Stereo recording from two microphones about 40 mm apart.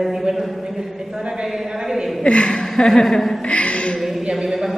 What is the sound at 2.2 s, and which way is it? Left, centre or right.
Speech, left.